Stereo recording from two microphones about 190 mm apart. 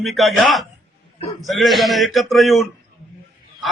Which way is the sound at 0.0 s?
Centre (ahead or behind).